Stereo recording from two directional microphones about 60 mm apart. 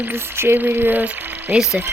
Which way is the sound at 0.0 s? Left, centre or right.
Right.